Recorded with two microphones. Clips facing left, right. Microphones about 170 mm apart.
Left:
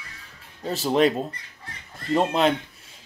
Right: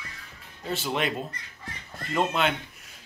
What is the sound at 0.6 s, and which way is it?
Speech, 35° left (ahead or behind).